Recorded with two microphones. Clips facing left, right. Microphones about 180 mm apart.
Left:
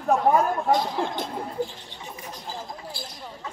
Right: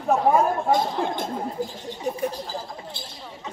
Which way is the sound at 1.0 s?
50° right (ahead or behind).